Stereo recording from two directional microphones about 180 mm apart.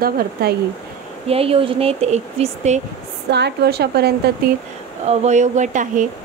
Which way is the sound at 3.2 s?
70° right (ahead or behind).